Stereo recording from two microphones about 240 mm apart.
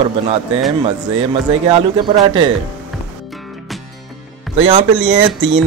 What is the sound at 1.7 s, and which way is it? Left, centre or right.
Speech, right.